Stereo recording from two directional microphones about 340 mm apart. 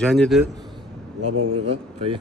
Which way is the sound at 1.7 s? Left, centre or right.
Centre.